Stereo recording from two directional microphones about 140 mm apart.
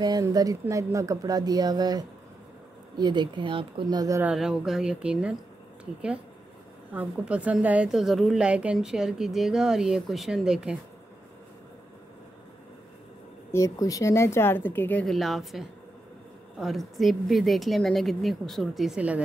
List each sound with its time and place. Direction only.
0.0 s speech: 30° right (ahead or behind)
4.2 s a woman's voice: 5° right (ahead or behind)
6.9 s a woman's voice: 10° right (ahead or behind)
13.5 s a woman's voice: 25° left (ahead or behind); by 19.2 s 10° right (ahead or behind)